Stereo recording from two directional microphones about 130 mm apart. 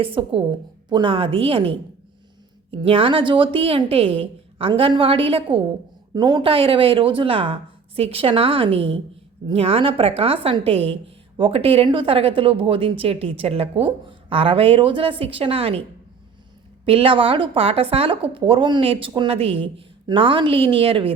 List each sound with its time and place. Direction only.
0.0 s speech: 45° right (ahead or behind)
2.8 s speech: 45° right (ahead or behind)
16.8 s speech: 45° right (ahead or behind)